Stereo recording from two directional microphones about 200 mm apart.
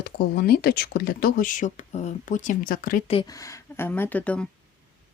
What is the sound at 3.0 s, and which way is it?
Speech, 30° left (ahead or behind).